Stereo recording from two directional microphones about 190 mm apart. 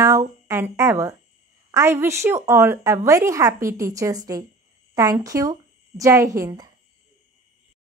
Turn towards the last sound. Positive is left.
turn(degrees=-20)  # may be behind; listen again after turning